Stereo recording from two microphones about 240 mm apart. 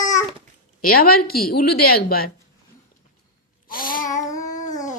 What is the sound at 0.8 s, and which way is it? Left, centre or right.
A woman's voice, left.